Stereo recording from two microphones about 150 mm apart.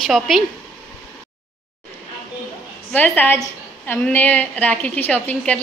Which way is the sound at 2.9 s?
10° left (ahead or behind).